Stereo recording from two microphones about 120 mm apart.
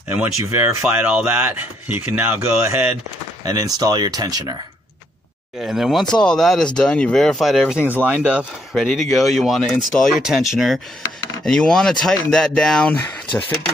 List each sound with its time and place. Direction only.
0.1 s speech: 15° right (ahead or behind)
3.4 s speech: 30° right (ahead or behind)
5.6 s speech: centre (ahead or behind)
7.8 s speech: 15° right (ahead or behind)
8.7 s speech: centre (ahead or behind)